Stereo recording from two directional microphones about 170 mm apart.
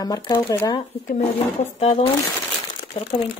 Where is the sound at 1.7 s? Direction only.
35° left (ahead or behind).